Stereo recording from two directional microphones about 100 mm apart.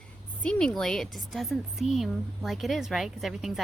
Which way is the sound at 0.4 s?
5° left (ahead or behind).